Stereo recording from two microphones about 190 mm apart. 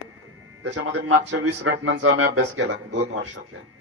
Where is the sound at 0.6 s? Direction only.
85° right; by 2.7 s 70° right (ahead or behind).